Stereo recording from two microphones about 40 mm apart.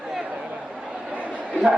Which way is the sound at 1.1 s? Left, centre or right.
Right.